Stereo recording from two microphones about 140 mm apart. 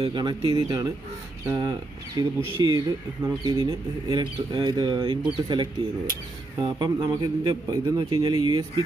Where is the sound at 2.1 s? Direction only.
30° right (ahead or behind).